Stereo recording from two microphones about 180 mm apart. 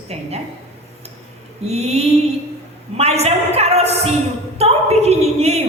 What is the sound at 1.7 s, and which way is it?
A woman's voice, 35° right (ahead or behind).